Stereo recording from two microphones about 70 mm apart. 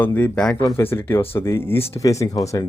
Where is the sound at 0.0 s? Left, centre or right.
Left.